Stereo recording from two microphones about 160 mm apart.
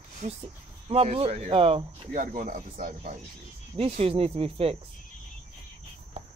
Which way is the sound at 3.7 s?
35° right (ahead or behind).